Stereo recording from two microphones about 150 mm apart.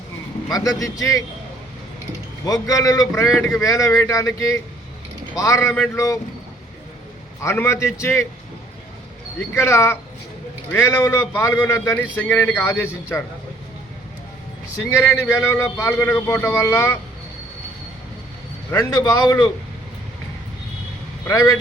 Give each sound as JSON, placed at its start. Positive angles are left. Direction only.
{"t": 0.5, "sound": "speech", "side_deg": 25}
{"t": 2.4, "sound": "speech", "side_deg": 25}
{"t": 7.4, "sound": "a man's voice", "side_deg": 20}
{"t": 9.4, "sound": "a man's voice", "side_deg": 20}
{"t": 14.8, "sound": "a man's voice", "side_deg": 15}
{"t": 18.8, "sound": "speech", "side_deg": 25}
{"t": 21.2, "sound": "speech", "side_deg": 20}